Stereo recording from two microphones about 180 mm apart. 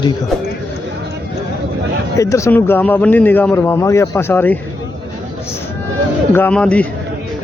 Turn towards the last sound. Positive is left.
turn(degrees=5)  # may be behind; listen again after turning